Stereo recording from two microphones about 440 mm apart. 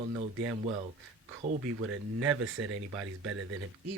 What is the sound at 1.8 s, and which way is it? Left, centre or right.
Speech, right.